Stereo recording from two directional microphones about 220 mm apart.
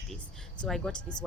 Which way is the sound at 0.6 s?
Centre (ahead or behind).